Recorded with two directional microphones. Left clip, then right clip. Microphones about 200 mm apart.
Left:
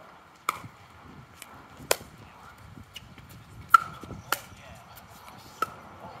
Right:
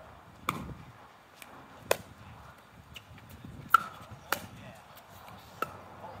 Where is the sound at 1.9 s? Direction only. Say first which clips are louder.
Left 2 dB; 30° left (ahead or behind).